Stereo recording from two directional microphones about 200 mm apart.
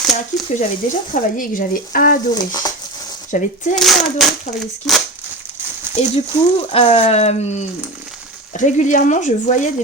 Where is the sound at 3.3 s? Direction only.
40° left (ahead or behind).